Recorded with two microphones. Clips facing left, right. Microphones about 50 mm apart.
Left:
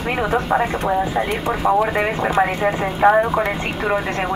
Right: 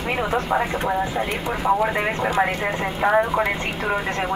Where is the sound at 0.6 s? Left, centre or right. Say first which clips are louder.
Left 3 dB; centre.